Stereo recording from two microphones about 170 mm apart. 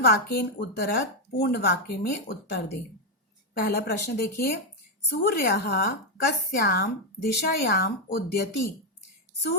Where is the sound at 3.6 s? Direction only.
65° left (ahead or behind).